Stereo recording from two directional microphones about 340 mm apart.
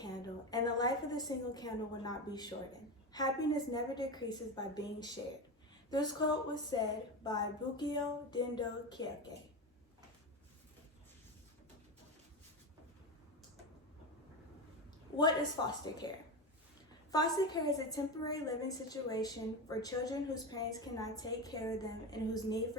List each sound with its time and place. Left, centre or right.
0.0 s a woman's voice: centre
15.2 s a woman's voice: centre
17.1 s a woman's voice: centre